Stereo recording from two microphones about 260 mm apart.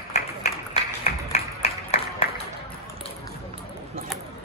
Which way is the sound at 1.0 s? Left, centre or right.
Left.